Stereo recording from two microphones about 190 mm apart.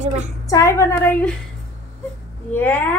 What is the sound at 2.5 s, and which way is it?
Speech, 10° left (ahead or behind).